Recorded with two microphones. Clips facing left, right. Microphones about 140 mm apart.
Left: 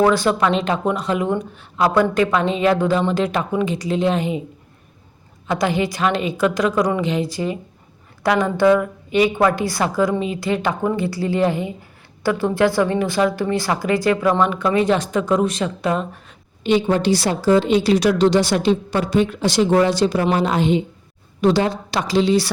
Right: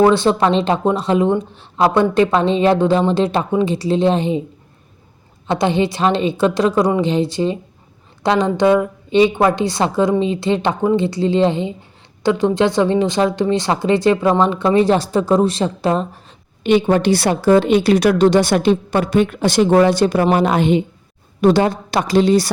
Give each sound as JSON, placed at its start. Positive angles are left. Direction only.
{"t": 0.0, "sound": "a woman's voice", "side_deg": -25}
{"t": 5.5, "sound": "a woman's voice", "side_deg": -25}
{"t": 16.6, "sound": "a woman's voice", "side_deg": -60}